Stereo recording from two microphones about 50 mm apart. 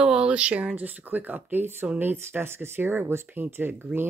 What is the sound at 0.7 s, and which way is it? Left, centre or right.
Speech, right.